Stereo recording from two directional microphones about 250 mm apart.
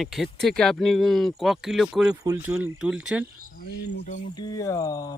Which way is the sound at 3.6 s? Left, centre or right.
Left.